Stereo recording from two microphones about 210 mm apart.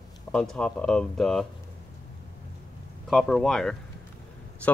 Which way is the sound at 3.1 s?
Centre (ahead or behind).